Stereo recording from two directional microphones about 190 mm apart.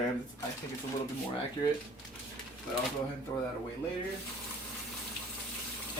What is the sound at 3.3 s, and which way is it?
Speech, 20° left (ahead or behind).